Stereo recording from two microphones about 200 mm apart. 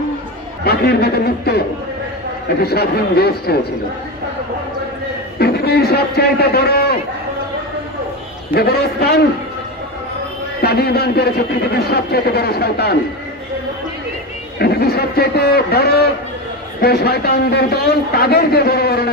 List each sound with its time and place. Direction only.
0.7 s a man's voice: 50° left (ahead or behind)
2.6 s a man's voice: 50° left (ahead or behind)
5.4 s a man's voice: 50° left (ahead or behind)
8.5 s a man's voice: 55° left (ahead or behind)
10.6 s a man's voice: 50° left (ahead or behind)
14.6 s a man's voice: 50° left (ahead or behind)